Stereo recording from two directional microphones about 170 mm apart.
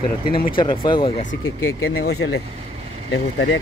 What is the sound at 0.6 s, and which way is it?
Speech, 30° left (ahead or behind).